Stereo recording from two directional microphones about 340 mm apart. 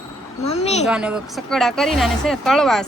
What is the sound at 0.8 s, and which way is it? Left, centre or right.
Speech, centre.